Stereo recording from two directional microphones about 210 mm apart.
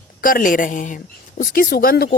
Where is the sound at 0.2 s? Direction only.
40° left (ahead or behind).